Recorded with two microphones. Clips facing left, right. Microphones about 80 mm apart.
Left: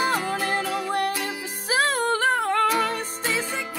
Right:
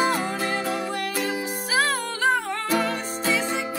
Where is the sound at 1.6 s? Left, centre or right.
Left.